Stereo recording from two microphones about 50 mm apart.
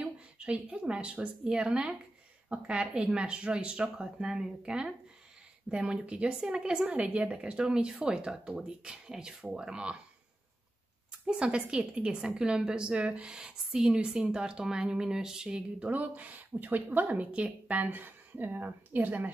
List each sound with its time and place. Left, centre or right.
0.0 s a woman's voice: right
11.2 s a woman's voice: centre
15.9 s speech: right
17.3 s speech: right
17.7 s speech: right